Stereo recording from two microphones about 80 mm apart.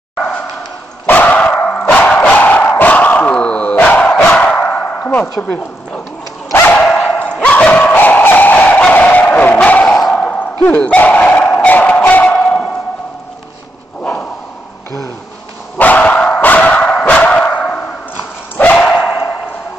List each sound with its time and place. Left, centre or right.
1.0 s dog: left
3.8 s battle cry: centre
6.9 s dog: centre
7.3 s dog: centre
7.9 s music: left
9.8 s a sound: centre
10.2 s dog: left
12.1 s music: left
15.8 s dog: centre
18.8 s dog: centre